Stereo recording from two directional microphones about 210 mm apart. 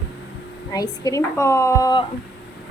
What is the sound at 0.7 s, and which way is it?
A woman's voice, 15° left (ahead or behind).